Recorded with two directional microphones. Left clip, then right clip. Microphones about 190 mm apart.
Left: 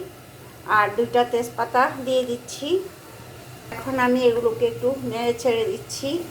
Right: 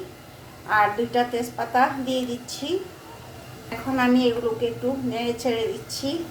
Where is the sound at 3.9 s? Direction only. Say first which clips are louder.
Left 3 dB; 15° left (ahead or behind).